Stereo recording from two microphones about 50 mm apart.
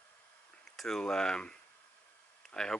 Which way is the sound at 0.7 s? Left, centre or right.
Centre.